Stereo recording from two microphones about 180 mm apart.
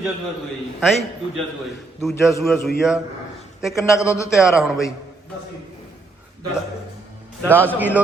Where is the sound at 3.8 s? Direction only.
15° left (ahead or behind).